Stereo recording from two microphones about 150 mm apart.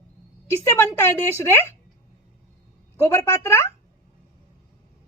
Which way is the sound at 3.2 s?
20° left (ahead or behind).